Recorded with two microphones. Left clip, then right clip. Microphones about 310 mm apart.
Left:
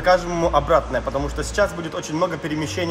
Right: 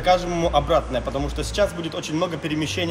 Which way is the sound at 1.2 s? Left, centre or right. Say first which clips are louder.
Left 2 dB; left.